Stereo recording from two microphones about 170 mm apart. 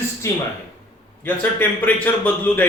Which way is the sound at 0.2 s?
15° left (ahead or behind).